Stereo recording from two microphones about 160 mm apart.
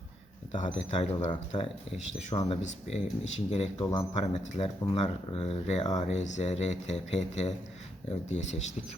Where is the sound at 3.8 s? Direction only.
20° left (ahead or behind).